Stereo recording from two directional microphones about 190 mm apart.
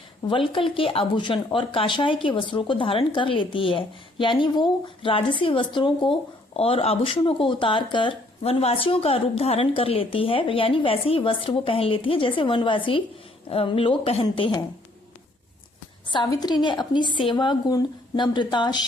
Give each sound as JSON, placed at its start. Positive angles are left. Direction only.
{"t": 0.3, "sound": "speech", "side_deg": 25}
{"t": 16.0, "sound": "speech", "side_deg": 20}